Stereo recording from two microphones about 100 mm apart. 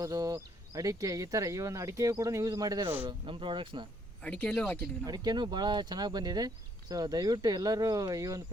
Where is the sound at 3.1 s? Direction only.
55° right (ahead or behind).